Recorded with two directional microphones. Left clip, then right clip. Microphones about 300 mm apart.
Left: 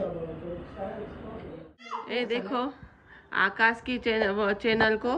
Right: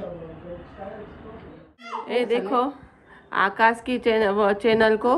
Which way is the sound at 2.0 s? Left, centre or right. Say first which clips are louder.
Right 7 dB; centre.